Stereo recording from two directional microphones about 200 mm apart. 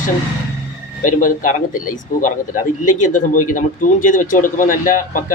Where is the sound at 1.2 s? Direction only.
40° left (ahead or behind).